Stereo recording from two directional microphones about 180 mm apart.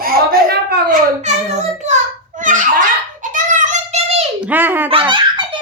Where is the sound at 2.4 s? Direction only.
45° right (ahead or behind).